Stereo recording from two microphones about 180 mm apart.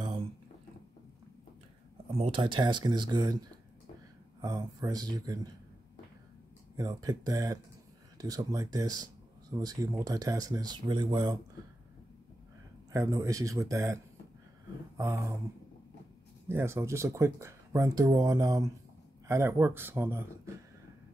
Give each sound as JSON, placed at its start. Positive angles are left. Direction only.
{"t": 2.1, "sound": "speech", "side_deg": -30}
{"t": 6.8, "sound": "speech", "side_deg": -20}
{"t": 12.9, "sound": "speech", "side_deg": -20}
{"t": 15.0, "sound": "speech", "side_deg": -15}
{"t": 16.4, "sound": "speech", "side_deg": -15}